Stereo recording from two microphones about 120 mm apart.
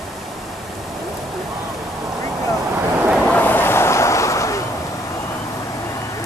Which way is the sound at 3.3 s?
15° left (ahead or behind).